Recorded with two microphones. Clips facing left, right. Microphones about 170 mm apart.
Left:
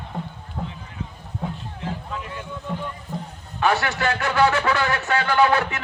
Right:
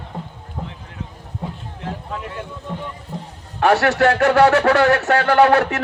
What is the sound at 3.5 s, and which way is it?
A man's voice, 75° right (ahead or behind).